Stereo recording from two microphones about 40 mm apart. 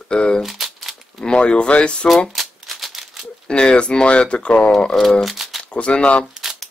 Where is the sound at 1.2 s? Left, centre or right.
Left.